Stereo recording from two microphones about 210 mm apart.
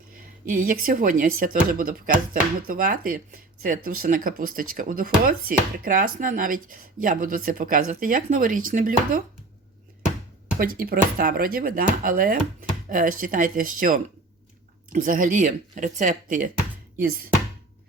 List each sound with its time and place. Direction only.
0.4 s speech: 40° right (ahead or behind)
10.6 s speech: 45° right (ahead or behind)